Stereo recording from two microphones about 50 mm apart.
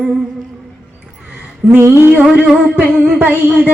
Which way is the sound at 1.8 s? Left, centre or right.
Right.